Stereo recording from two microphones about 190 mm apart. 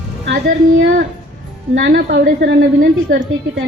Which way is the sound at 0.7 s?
85° right.